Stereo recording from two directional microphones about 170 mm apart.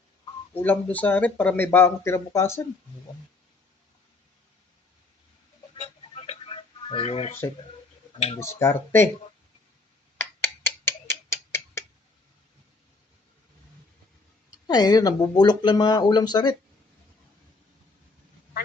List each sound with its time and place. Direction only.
0.5 s speech: 10° left (ahead or behind)
5.7 s telephone: 40° left (ahead or behind)
8.4 s speech: 15° left (ahead or behind)
10.2 s a sound: 15° left (ahead or behind)
10.8 s tick-tock: 15° left (ahead or behind)
14.7 s speech: 25° left (ahead or behind)